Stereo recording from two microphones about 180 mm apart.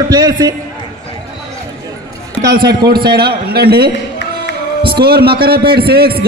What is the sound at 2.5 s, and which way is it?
A man's voice, 60° right (ahead or behind).